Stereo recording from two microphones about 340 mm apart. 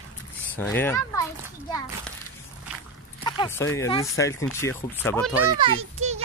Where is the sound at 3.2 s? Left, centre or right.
Centre.